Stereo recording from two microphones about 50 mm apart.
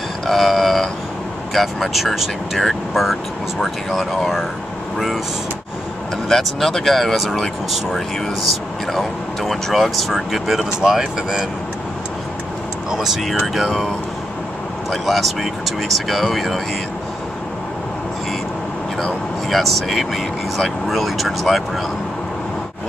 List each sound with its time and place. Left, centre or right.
0.3 s a sound: centre
1.5 s speech: centre
6.2 s speech: centre
12.9 s speech: centre
14.9 s speech: centre
19.5 s speech: centre